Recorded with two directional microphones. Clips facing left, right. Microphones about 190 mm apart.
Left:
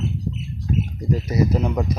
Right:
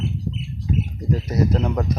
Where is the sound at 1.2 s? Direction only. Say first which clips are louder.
Left 1 dB; 5° left (ahead or behind).